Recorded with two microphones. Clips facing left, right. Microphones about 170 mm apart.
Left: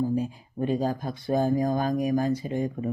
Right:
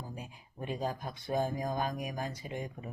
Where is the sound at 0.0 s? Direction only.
35° left (ahead or behind).